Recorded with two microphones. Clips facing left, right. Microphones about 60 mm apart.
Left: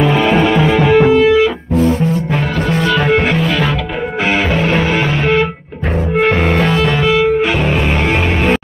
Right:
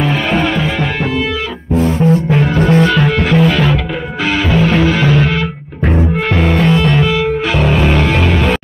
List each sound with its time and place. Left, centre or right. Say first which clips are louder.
0.0 s music: left 3 dB; centre
1.7 s music: right 1 dB; right
3.0 s music: left 1 dB; centre
3.3 s music: right 3 dB; centre
6.4 s music: right 1 dB; centre